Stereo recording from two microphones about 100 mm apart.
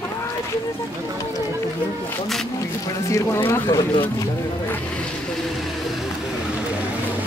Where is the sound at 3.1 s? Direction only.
25° left (ahead or behind).